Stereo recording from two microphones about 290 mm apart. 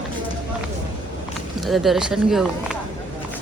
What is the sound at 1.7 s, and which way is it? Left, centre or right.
Speech, centre.